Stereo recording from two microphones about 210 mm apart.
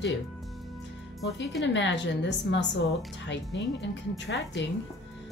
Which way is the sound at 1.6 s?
60° left (ahead or behind).